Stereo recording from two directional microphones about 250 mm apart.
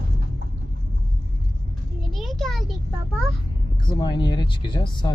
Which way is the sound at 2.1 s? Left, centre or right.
Centre.